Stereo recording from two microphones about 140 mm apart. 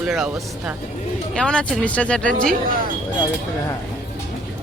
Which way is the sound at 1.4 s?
5° left (ahead or behind).